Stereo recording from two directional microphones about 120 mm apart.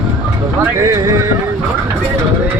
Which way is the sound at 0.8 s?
25° right (ahead or behind).